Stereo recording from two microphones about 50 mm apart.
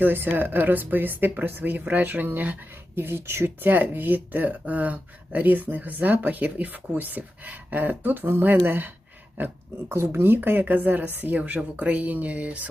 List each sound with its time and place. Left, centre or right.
0.0 s speech: right
2.9 s speech: right
9.9 s speech: right